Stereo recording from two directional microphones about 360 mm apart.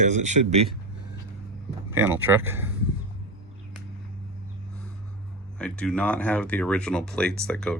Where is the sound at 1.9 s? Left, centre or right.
Centre.